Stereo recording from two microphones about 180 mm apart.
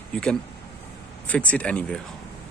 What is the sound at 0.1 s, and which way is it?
Speech, 5° left (ahead or behind).